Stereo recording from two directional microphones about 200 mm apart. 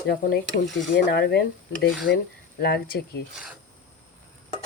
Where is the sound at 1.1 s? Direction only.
55° left (ahead or behind).